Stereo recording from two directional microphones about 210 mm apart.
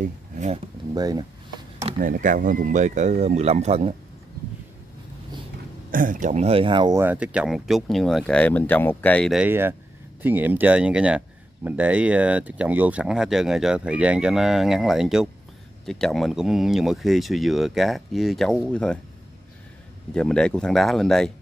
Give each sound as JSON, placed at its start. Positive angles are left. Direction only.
{"t": 0.0, "sound": "a sound", "side_deg": -35}
{"t": 0.9, "sound": "speech", "side_deg": -20}
{"t": 2.0, "sound": "speech", "side_deg": -40}
{"t": 5.9, "sound": "speech", "side_deg": -40}
{"t": 20.2, "sound": "speech", "side_deg": 5}